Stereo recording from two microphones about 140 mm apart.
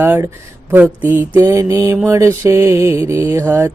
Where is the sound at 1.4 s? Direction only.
20° right (ahead or behind).